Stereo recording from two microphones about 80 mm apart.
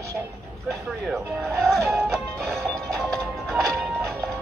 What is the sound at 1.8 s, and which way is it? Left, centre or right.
Music, right.